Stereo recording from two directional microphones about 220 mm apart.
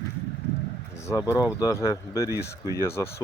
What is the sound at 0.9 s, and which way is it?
Speech, 15° left (ahead or behind).